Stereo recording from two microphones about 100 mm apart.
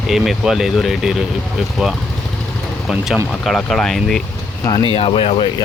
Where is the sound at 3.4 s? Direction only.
5° left (ahead or behind).